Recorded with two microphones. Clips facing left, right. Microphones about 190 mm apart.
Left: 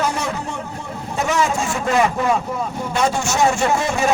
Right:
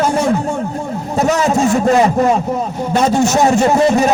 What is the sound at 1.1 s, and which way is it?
Speech, 40° right (ahead or behind).